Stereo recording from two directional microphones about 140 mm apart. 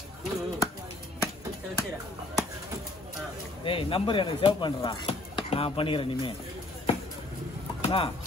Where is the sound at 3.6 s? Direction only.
40° left (ahead or behind).